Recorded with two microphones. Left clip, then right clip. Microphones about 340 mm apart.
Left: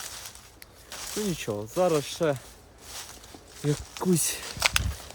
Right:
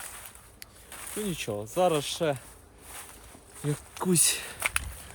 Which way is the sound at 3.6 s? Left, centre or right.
Centre.